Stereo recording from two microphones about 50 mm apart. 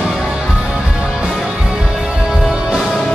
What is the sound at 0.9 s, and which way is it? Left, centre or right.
Music, centre.